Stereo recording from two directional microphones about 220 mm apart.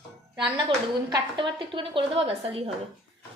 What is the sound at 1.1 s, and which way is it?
A woman's voice, 20° right (ahead or behind).